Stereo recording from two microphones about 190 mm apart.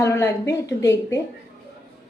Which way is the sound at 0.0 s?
15° left (ahead or behind).